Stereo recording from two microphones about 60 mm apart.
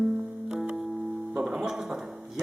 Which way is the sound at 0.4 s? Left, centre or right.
Centre.